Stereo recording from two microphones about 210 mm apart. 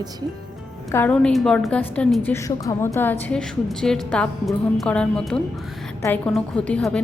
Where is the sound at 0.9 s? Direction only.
10° left (ahead or behind).